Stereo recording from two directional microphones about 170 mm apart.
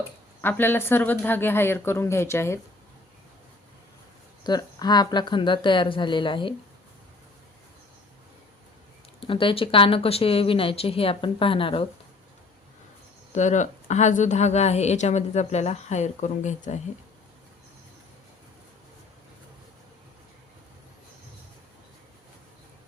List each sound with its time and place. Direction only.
0.4 s speech: 10° left (ahead or behind)
4.4 s a woman's voice: 25° left (ahead or behind)
9.2 s a woman's voice: 30° left (ahead or behind)
13.3 s a woman's voice: 45° left (ahead or behind)